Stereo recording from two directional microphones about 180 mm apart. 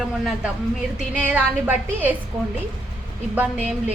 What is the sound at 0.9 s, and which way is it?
A woman's voice, 5° right (ahead or behind).